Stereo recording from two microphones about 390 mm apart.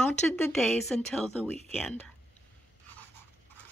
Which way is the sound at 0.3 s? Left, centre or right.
Centre.